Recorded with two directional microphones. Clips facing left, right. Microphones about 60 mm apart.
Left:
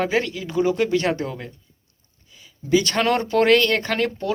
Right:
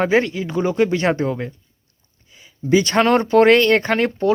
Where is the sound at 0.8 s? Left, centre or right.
Right.